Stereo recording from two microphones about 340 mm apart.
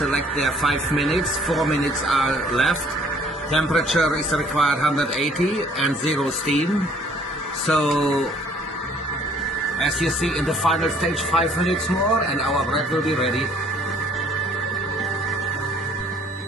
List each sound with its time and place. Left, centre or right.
0.0 s a man's voice: centre
7.7 s a man's voice: centre
9.8 s a man's voice: centre